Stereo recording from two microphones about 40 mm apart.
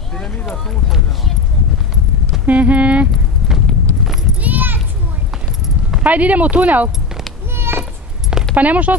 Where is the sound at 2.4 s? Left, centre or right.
Right.